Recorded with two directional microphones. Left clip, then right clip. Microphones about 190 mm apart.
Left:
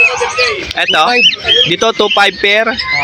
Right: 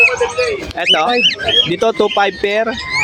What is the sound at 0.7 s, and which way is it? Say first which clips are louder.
Speech: left 3 dB; 5° right (ahead or behind).